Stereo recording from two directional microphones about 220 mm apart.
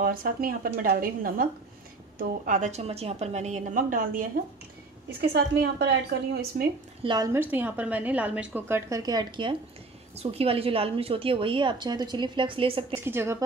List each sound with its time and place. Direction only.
0.0 s a woman's voice: 40° right (ahead or behind)
5.3 s a woman's voice: 50° right (ahead or behind)
7.0 s a woman's voice: 20° right (ahead or behind)
7.3 s a woman's voice: 10° right (ahead or behind); by 13.0 s 25° right (ahead or behind)
13.0 s a woman's voice: 10° right (ahead or behind)